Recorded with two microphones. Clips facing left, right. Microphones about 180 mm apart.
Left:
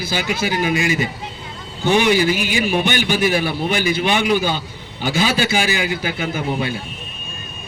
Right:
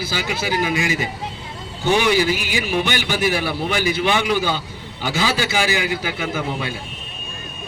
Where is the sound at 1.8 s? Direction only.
20° left (ahead or behind).